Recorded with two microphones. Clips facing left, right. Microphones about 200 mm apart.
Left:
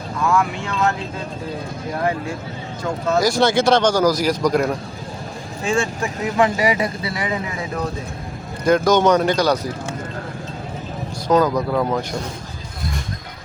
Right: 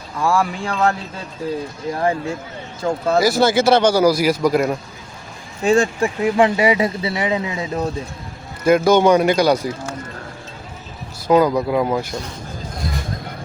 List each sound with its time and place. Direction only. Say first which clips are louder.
0.2 s speech: right 1 dB; 30° right (ahead or behind)
2.8 s speech: right 4 dB; 30° right (ahead or behind)
3.2 s a man's voice: right 1 dB; 5° right (ahead or behind)
5.6 s speech: right 6 dB; 35° right (ahead or behind)
8.6 s speech: right 2 dB; 5° right (ahead or behind)
11.3 s speech: right 2 dB; 10° right (ahead or behind)